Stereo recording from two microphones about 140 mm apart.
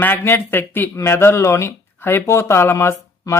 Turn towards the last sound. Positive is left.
turn(degrees=20)  # may be behind; listen again after turning